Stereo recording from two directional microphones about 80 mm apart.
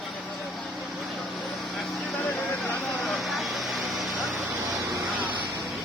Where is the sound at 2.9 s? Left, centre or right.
Centre.